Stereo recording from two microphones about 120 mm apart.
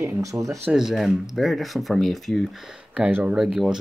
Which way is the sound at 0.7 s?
5° right (ahead or behind).